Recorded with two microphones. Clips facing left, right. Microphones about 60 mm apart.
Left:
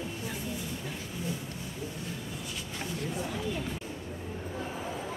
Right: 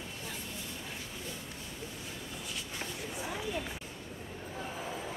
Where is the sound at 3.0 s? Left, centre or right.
Centre.